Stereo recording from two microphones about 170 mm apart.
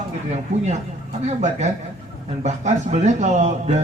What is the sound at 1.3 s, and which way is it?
A man's voice, 40° right (ahead or behind).